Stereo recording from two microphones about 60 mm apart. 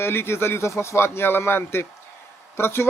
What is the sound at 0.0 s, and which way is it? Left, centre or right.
Speech, left.